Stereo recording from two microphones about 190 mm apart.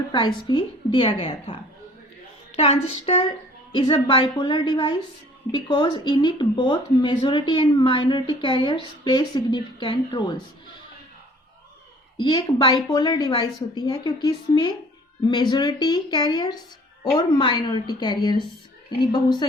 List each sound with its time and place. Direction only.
0.1 s a woman's voice: 25° left (ahead or behind)
12.2 s speech: 20° left (ahead or behind)